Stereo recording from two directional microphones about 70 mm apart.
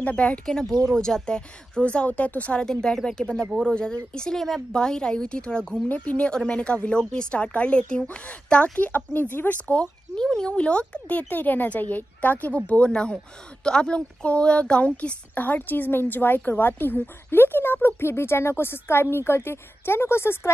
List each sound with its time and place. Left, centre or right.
0.0 s speech: centre
2.6 s speech: centre; by 9.6 s left
9.7 s speech: centre; by 20.5 s left